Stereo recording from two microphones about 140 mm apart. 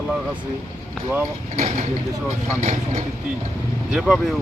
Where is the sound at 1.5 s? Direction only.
55° right (ahead or behind).